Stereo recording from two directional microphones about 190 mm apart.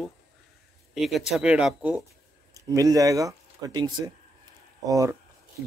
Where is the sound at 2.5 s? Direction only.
20° right (ahead or behind).